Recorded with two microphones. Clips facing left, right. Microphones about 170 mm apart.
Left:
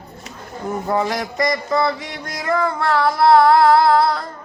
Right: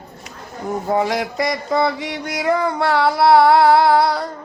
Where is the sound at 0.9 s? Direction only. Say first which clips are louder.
Right 2 dB; 15° right (ahead or behind).